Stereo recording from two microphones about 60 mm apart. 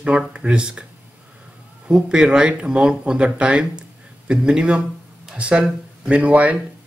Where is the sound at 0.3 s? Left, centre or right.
Centre.